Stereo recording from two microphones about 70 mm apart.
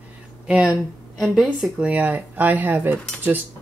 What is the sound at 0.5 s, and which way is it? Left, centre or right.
Speech, centre.